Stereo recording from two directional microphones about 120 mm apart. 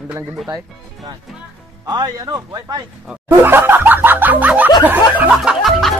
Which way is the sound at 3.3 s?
20° right (ahead or behind).